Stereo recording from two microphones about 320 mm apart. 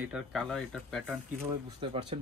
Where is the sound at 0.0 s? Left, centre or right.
Centre.